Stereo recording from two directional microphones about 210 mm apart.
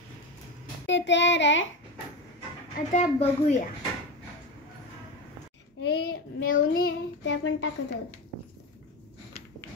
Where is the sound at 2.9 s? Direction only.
35° left (ahead or behind).